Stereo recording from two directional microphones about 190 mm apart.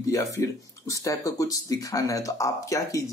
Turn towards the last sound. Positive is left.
turn(degrees=15)  # may be behind; listen again after turning